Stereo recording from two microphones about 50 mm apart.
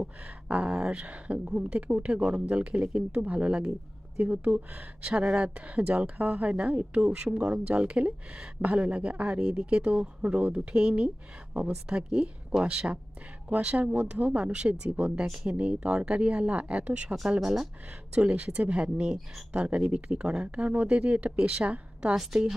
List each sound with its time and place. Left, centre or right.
0.4 s a sound: right
0.7 s speech: right
4.2 s speech: right
5.1 s speech: centre
17.4 s speech: centre
18.1 s a woman's voice: right
22.1 s speech: centre